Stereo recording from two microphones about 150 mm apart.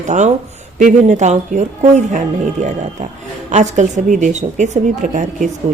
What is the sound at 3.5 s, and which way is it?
A woman's voice, 50° right (ahead or behind).